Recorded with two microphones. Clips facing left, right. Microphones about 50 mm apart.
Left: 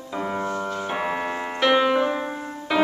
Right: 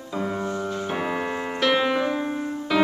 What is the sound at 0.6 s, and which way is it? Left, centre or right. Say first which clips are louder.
Keyboard: left 1 dB; centre.